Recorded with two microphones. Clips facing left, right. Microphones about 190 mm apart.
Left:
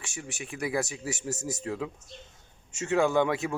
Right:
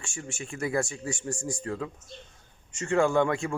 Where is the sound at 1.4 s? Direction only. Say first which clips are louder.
Even; 20° left (ahead or behind); by 3.4 s 5° left (ahead or behind).